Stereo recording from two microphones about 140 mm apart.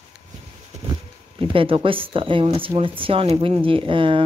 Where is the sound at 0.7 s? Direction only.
55° right (ahead or behind).